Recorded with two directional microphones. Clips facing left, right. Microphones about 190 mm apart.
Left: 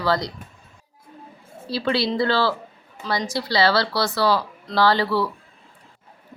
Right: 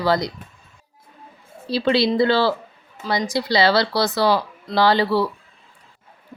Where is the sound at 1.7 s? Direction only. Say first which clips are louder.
Right 4 dB; 20° right (ahead or behind).